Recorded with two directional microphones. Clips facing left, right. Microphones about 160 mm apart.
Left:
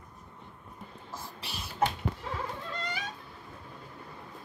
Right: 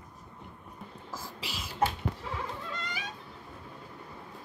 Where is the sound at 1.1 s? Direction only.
90° right.